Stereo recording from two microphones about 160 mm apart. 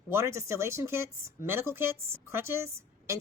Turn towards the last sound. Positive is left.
turn(degrees=-15)  # may be behind; listen again after turning